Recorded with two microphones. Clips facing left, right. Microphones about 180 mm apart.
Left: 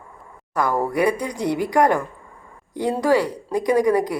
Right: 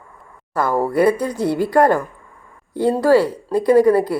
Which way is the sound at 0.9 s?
15° left (ahead or behind).